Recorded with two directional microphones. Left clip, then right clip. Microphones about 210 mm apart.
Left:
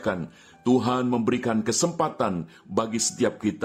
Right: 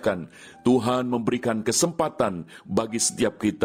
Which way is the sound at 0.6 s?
35° right (ahead or behind).